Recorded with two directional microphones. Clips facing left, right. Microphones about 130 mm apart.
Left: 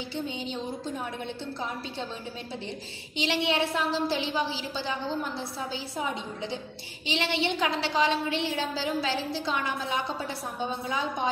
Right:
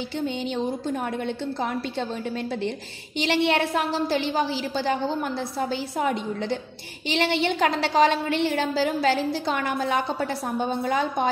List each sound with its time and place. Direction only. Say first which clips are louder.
0.5 s a woman's voice: right 7 dB; 65° right (ahead or behind)
3.2 s a woman's voice: right 5 dB; 55° right (ahead or behind)